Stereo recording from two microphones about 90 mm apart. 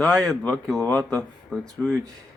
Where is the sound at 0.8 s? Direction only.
20° left (ahead or behind).